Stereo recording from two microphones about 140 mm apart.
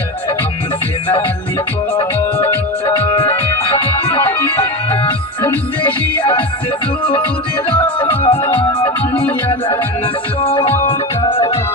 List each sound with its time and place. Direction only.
2.0 s music: 40° left (ahead or behind)
5.4 s music: 10° left (ahead or behind)
8.0 s music: 40° left (ahead or behind)
8.4 s music: 20° left (ahead or behind)
10.4 s music: 45° left (ahead or behind)